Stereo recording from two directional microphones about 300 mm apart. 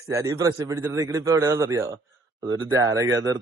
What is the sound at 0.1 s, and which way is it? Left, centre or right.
A man's voice, centre.